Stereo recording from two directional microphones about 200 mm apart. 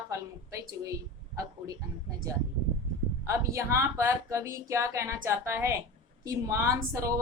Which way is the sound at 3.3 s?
15° right (ahead or behind).